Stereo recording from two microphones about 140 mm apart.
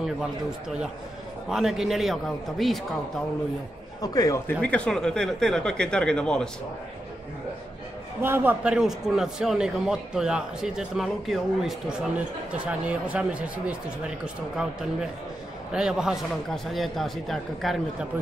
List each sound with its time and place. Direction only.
1.5 s a man's voice: 5° right (ahead or behind)
4.0 s a man's voice: 25° left (ahead or behind)
4.5 s a man's voice: 10° left (ahead or behind)
8.2 s a man's voice: 15° right (ahead or behind); by 17.7 s centre (ahead or behind)